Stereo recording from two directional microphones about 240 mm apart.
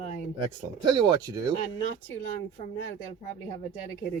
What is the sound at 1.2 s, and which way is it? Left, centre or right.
Speech, centre.